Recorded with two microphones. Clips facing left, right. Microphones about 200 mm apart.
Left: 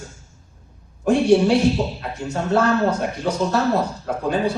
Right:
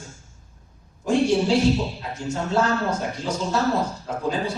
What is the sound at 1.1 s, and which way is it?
A man's voice, 60° left (ahead or behind).